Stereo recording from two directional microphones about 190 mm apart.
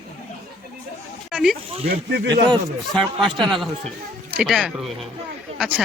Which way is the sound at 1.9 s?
60° right (ahead or behind).